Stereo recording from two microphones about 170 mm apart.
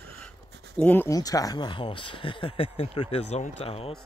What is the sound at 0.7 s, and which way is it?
Speech, 10° left (ahead or behind).